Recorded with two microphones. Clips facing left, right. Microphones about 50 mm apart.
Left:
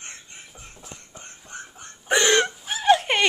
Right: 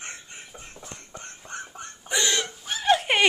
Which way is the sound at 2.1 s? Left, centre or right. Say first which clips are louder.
Left 7 dB; left.